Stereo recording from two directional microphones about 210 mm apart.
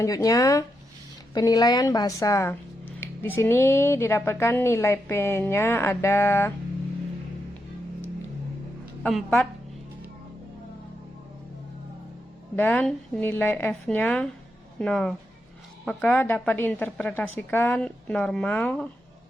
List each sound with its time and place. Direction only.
0.0 s speech: 15° left (ahead or behind)
9.0 s a woman's voice: centre (ahead or behind)
12.5 s a woman's voice: 10° left (ahead or behind)